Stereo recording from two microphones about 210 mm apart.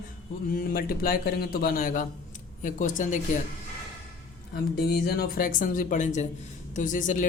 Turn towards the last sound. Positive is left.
turn(degrees=40)  # may be behind; listen again after turning